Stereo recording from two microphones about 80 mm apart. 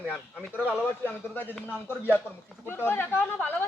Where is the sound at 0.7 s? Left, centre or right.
Left.